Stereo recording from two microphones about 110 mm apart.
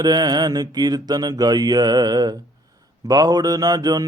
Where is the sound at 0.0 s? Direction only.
40° right (ahead or behind).